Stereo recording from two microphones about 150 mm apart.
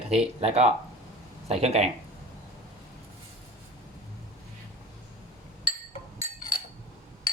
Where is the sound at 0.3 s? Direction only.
45° right (ahead or behind).